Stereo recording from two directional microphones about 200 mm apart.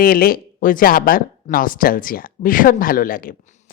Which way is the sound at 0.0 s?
45° left (ahead or behind).